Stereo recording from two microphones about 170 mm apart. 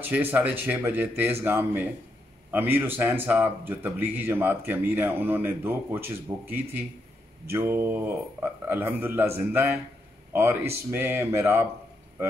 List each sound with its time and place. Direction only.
0.0 s speech: 10° right (ahead or behind)